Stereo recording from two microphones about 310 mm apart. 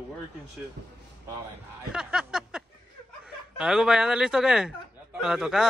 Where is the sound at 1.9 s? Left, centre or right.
Centre.